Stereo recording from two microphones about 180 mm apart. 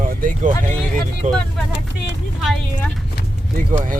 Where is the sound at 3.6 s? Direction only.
50° right (ahead or behind).